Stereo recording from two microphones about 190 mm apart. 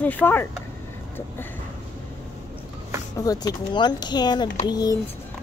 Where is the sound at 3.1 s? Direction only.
20° left (ahead or behind).